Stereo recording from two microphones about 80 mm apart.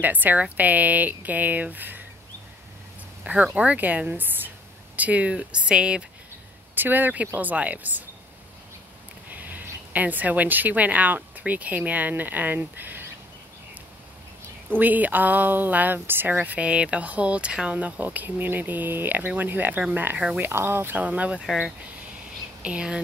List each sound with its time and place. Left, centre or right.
0.0 s speech: right
3.5 s speech: centre
4.2 s a sound: right
4.9 s speech: centre
6.7 s speech: right
9.3 s a woman's voice: right
14.7 s speech: right
21.5 s speech: centre
22.6 s speech: centre